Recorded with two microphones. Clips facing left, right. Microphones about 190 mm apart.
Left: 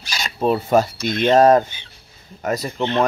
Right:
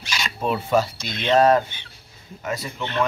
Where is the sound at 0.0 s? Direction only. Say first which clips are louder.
Left 5 dB; 35° left (ahead or behind).